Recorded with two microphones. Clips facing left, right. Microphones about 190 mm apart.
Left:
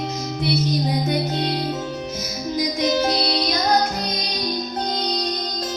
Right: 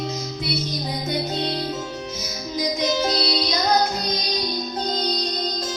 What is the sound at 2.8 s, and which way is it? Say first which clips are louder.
Music: left 3 dB; 55° left (ahead or behind).